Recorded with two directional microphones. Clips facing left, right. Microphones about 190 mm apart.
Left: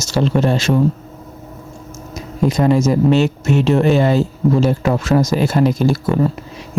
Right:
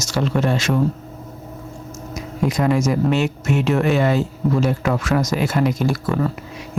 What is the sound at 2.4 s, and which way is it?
Speech, 30° left (ahead or behind).